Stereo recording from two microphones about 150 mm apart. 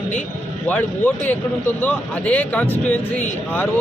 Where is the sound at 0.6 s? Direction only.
10° left (ahead or behind).